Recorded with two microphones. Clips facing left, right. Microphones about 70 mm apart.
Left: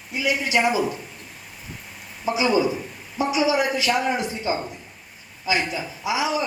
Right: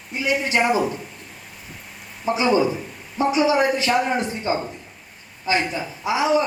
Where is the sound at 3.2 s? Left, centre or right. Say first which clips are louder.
Right 3 dB; right.